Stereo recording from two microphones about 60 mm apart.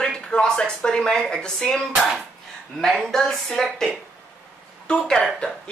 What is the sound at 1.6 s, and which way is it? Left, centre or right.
A woman's voice, centre.